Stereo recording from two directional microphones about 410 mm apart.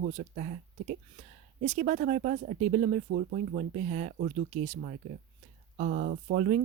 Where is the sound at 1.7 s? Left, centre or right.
Centre.